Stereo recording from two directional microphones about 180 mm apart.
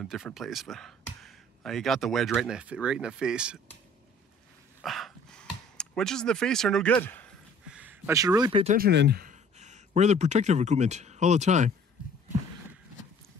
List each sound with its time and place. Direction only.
0.0 s speech: centre (ahead or behind)
4.8 s dog: centre (ahead or behind)
5.8 s speech: 5° left (ahead or behind)
7.6 s a sound: 5° right (ahead or behind); by 8.6 s 25° right (ahead or behind)
8.7 s speech: 65° right (ahead or behind); by 11.7 s 40° right (ahead or behind)